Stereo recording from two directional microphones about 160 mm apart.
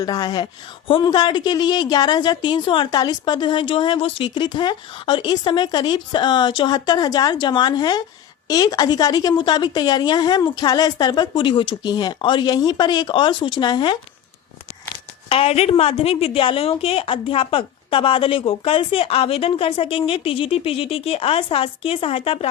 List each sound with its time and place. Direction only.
0.0 s a woman's voice: 25° left (ahead or behind)
15.3 s a woman's voice: 40° left (ahead or behind)